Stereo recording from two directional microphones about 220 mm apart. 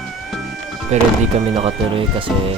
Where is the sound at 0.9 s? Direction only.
30° right (ahead or behind).